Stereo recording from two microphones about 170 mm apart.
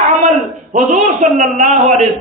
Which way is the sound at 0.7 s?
50° right (ahead or behind).